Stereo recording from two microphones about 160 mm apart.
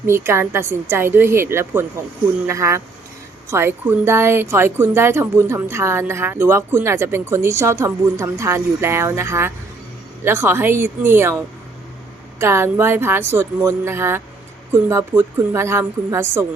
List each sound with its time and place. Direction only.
0.0 s speech: 15° right (ahead or behind)
12.4 s speech: 15° right (ahead or behind)